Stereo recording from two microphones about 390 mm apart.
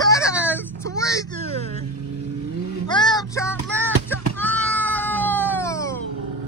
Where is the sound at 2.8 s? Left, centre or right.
Centre.